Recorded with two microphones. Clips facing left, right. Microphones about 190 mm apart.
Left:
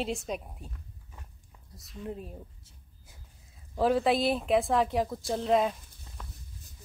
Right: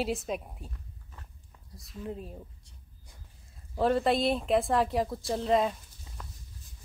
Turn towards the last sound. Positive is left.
turn(degrees=0)  # may be behind; listen again after turning